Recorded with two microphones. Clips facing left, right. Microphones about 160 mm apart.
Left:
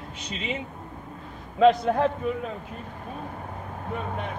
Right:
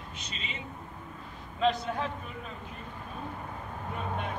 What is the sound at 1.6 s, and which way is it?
Speech, 60° left (ahead or behind).